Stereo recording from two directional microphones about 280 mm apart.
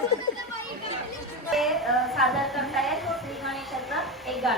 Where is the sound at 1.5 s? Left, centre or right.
Centre.